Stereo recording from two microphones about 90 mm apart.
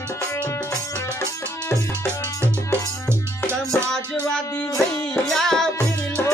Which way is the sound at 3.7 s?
10° left (ahead or behind).